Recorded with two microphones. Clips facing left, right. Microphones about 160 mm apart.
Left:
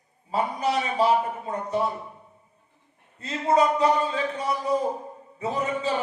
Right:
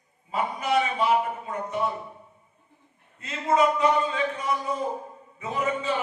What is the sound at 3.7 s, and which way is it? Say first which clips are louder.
A man's voice: left 1 dB; 35° left (ahead or behind).